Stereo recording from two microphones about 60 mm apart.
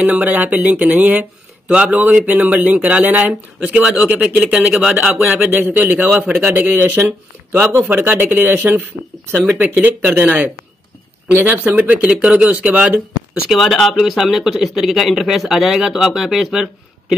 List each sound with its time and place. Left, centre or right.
0.0 s speech: right
5.5 s a man's voice: right
7.8 s a man's voice: right
13.5 s speech: centre